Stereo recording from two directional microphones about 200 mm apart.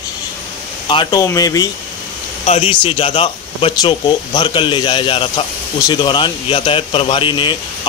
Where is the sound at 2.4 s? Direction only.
30° left (ahead or behind).